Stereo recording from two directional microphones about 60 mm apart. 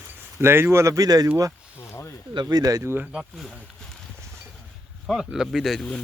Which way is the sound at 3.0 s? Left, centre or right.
Centre.